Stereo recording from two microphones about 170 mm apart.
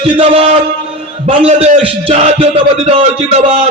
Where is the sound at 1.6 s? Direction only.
35° right (ahead or behind).